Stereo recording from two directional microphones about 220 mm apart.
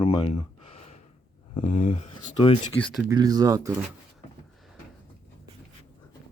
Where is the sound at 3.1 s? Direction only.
15° right (ahead or behind).